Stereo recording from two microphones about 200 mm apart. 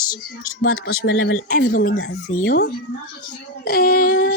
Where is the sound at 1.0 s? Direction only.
90° left.